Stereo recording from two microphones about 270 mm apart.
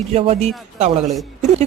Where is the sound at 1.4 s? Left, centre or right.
Right.